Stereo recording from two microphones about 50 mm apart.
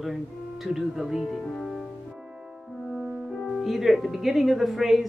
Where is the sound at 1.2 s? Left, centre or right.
Centre.